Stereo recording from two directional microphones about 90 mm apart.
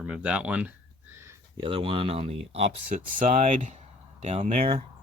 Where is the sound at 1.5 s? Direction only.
70° right (ahead or behind); by 2.4 s 90° right.